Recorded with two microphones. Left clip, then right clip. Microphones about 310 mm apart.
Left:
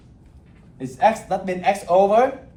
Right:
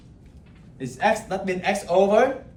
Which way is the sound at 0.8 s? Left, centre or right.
Centre.